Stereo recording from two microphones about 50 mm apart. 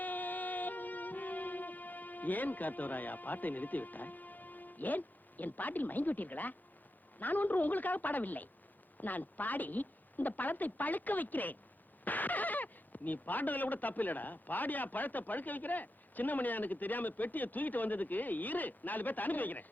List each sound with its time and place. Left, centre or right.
0.0 s music: left
7.2 s speech: left